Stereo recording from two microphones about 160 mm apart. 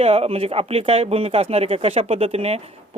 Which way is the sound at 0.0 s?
40° right (ahead or behind).